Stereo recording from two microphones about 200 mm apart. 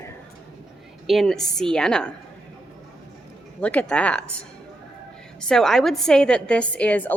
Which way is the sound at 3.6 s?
5° left (ahead or behind).